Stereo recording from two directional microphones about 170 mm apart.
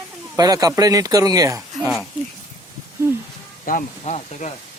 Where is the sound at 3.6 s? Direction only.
50° left (ahead or behind).